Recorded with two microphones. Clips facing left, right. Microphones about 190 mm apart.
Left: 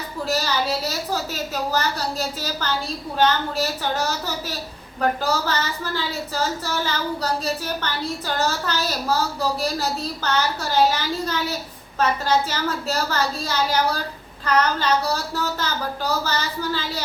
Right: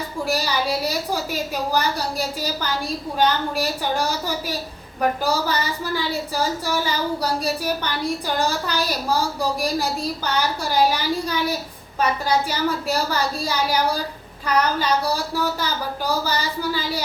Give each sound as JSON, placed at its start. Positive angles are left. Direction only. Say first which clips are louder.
{"t": 0.3, "sound": "a woman's voice", "louder": "even", "side_deg": -10}